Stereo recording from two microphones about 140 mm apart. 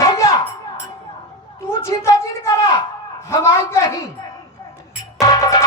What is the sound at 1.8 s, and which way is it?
A man's voice, 20° left (ahead or behind).